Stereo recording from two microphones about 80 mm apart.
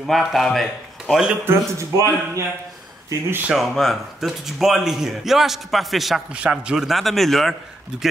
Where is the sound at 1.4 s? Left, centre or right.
Right.